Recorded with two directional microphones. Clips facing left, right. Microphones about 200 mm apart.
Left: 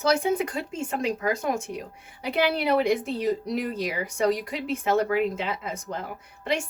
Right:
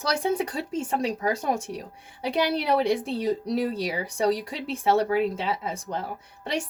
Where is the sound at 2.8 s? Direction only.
35° right (ahead or behind).